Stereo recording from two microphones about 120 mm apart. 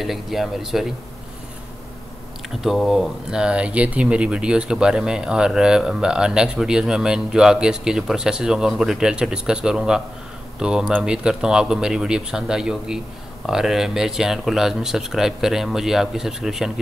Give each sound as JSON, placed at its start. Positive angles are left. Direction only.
{"t": 0.0, "sound": "speech", "side_deg": 0}
{"t": 2.6, "sound": "speech", "side_deg": 0}